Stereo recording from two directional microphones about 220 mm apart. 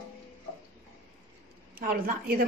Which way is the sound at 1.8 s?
40° right (ahead or behind).